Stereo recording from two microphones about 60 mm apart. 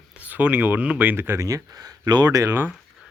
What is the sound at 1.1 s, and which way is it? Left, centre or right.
Speech, right.